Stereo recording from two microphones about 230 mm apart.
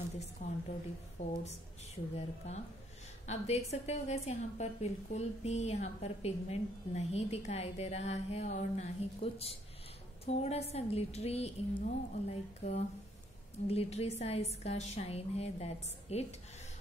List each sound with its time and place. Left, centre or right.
1.2 s a woman's voice: left